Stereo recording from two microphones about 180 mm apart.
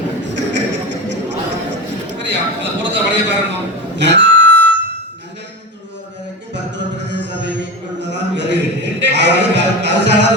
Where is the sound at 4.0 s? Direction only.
75° right (ahead or behind).